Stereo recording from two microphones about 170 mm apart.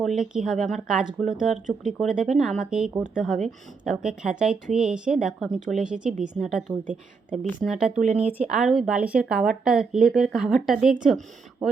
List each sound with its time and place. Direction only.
0.0 s a woman's voice: centre (ahead or behind)
7.9 s speech: 40° right (ahead or behind)
8.4 s a woman's voice: centre (ahead or behind)